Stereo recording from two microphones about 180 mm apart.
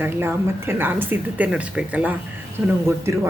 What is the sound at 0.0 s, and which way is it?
Speech, 10° right (ahead or behind).